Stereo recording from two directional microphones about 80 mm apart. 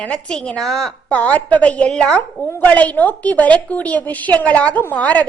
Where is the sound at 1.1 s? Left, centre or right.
Centre.